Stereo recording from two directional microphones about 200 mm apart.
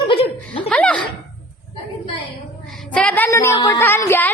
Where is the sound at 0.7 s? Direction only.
5° left (ahead or behind).